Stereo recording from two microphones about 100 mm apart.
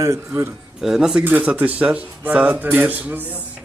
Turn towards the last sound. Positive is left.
turn(degrees=-15)  # may be behind; listen again after turning